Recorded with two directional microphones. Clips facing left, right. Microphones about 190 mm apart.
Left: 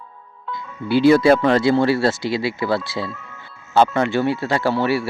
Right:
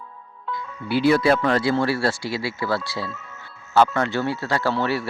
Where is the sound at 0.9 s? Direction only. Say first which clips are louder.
Left 5 dB; 25° left (ahead or behind).